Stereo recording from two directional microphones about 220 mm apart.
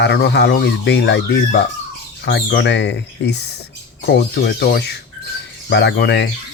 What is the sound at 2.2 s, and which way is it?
Speech, 50° left (ahead or behind).